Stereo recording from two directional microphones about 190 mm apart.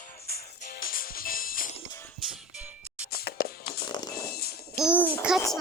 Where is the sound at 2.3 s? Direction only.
5° right (ahead or behind).